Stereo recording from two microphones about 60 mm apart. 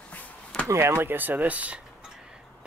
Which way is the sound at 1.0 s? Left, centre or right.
Right.